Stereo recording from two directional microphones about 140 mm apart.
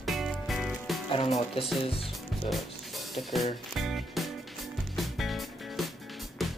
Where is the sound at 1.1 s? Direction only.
45° left (ahead or behind).